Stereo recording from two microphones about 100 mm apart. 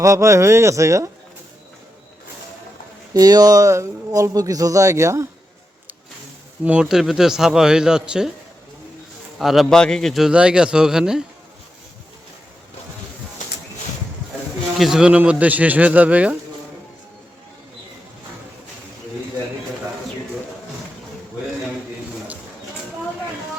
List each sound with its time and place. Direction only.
0.0 s speech: 30° right (ahead or behind)
3.1 s speech: 40° right (ahead or behind)
6.7 s a man's voice: 10° right (ahead or behind)
9.4 s a man's voice: centre (ahead or behind)
14.8 s speech: 5° right (ahead or behind)